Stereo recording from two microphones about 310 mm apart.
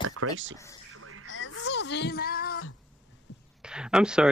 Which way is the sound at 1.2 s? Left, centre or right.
Left.